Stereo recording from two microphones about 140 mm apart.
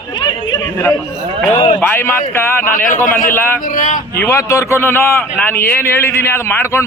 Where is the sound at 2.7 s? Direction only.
80° left.